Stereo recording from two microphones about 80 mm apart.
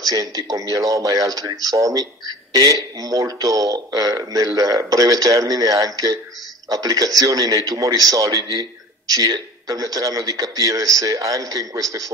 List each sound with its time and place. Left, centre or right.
0.1 s speech: right